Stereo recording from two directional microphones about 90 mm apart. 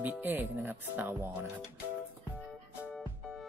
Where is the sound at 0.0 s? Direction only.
20° right (ahead or behind).